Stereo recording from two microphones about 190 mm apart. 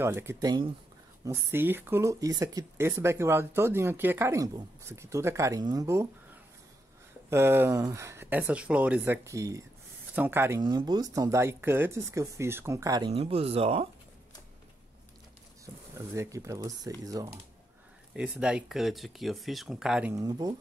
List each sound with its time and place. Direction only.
0.0 s speech: 15° right (ahead or behind)
7.2 s speech: 10° right (ahead or behind)
10.6 s speech: 25° right (ahead or behind)
13.1 s speech: 30° right (ahead or behind)
16.2 s speech: 15° right (ahead or behind)
18.1 s speech: 5° right (ahead or behind)
20.2 s speech: 20° right (ahead or behind)